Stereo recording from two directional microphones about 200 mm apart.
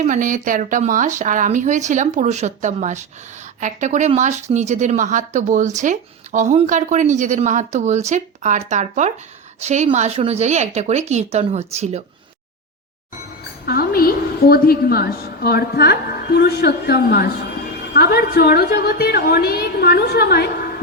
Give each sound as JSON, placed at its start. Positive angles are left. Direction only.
{"t": 0.0, "sound": "speech", "side_deg": -40}
{"t": 13.7, "sound": "a woman's voice", "side_deg": 50}